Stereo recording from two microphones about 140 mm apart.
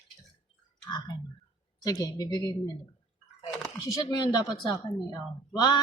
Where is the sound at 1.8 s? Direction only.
25° left (ahead or behind).